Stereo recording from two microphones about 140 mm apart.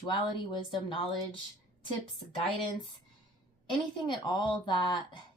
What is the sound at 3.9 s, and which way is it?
Speech, 35° left (ahead or behind).